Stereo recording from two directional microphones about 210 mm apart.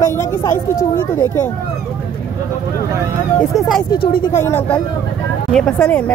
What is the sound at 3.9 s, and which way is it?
Speech, 45° left (ahead or behind).